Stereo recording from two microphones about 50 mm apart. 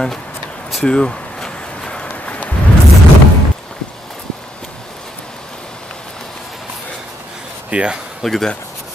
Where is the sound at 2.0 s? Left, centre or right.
Left.